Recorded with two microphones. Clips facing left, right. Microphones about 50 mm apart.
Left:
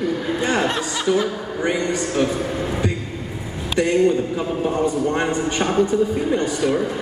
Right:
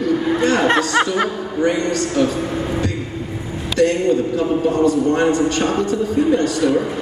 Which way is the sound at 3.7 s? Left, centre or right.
Centre.